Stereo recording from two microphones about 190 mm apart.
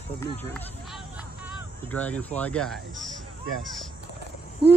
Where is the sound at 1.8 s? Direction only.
10° left (ahead or behind).